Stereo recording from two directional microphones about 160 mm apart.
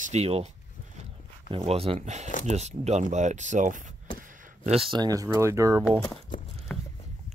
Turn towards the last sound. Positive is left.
turn(degrees=10)  # may be behind; listen again after turning